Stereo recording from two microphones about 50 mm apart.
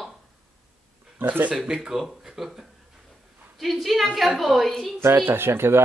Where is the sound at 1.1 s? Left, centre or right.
Right.